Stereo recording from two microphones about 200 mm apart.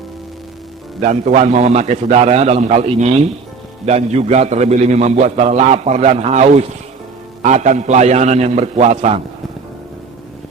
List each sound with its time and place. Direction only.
1.0 s a man's voice: 35° right (ahead or behind)